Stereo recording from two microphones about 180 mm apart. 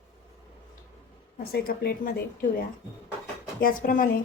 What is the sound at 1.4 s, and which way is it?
Speech, 60° left (ahead or behind).